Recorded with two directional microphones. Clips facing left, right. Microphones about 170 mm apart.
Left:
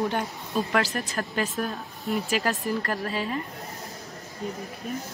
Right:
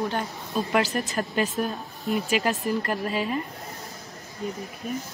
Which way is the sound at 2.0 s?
Centre (ahead or behind).